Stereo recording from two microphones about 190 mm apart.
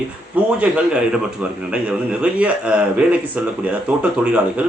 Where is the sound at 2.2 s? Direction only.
5° right (ahead or behind).